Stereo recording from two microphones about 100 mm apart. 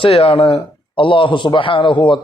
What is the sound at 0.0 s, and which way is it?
A man's voice, 70° left (ahead or behind).